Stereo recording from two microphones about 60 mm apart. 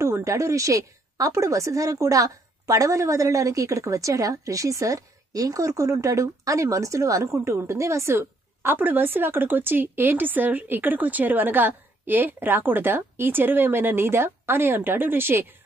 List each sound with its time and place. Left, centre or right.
0.0 s a woman's voice: right
8.7 s speech: right